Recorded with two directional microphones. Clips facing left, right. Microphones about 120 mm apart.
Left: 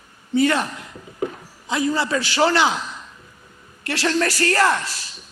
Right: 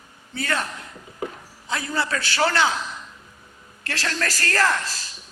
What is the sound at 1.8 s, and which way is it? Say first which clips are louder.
Speech: left 6 dB; 15° left (ahead or behind).